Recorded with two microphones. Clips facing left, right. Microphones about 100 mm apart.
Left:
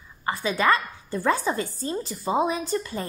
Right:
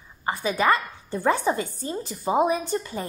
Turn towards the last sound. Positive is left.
turn(degrees=-15)  # may be behind; listen again after turning